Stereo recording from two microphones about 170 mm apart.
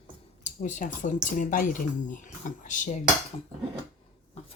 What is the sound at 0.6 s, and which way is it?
Speech, 50° left (ahead or behind).